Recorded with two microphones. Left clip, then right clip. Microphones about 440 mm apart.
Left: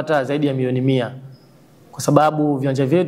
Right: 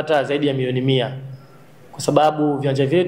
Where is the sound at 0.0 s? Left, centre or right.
Left.